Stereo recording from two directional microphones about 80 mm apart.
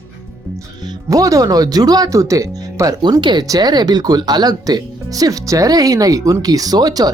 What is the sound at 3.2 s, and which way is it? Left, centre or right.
Speech, right.